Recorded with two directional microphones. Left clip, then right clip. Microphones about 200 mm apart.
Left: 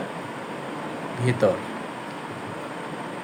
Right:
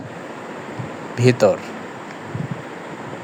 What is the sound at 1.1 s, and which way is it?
Speech, 35° right (ahead or behind).